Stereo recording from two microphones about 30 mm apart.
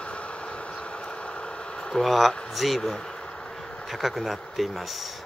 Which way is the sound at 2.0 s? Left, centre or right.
Centre.